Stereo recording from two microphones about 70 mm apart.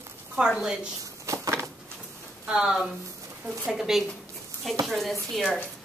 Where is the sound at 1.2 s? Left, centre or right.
Right.